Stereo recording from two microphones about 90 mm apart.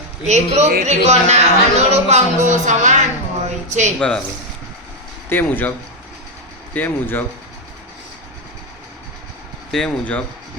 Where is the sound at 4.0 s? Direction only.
10° left (ahead or behind).